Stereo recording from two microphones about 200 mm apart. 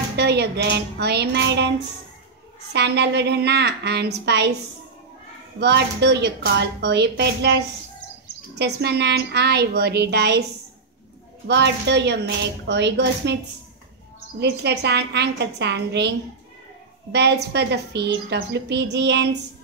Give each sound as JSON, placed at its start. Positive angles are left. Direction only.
{"t": 0.2, "sound": "a woman's voice", "side_deg": -55}
{"t": 2.7, "sound": "a woman's voice", "side_deg": -60}
{"t": 5.6, "sound": "a woman's voice", "side_deg": -55}
{"t": 11.4, "sound": "a woman's voice", "side_deg": -60}
{"t": 14.4, "sound": "a woman's voice", "side_deg": -55}
{"t": 17.1, "sound": "a woman's voice", "side_deg": -55}